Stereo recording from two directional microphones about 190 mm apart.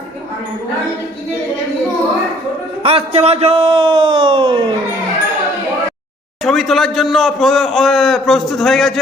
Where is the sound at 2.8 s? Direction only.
30° right (ahead or behind).